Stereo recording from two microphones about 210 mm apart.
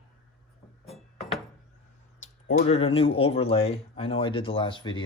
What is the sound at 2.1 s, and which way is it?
Speech, 35° left (ahead or behind).